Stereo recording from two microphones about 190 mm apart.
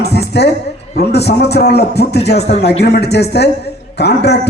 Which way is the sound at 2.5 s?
35° left (ahead or behind).